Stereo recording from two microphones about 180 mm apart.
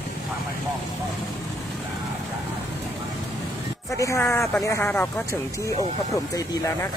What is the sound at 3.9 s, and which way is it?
Speech, 15° left (ahead or behind).